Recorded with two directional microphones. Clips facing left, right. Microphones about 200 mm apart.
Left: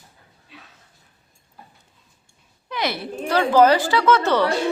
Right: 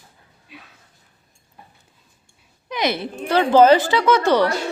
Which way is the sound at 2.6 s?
20° right (ahead or behind).